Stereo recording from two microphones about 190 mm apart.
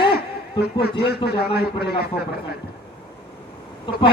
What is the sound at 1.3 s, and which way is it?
Speech, 55° left (ahead or behind).